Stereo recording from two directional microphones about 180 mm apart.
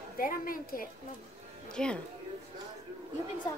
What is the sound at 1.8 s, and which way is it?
Speech, 5° left (ahead or behind).